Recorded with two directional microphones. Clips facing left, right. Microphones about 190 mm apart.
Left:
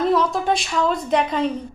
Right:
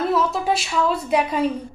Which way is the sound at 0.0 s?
5° right (ahead or behind).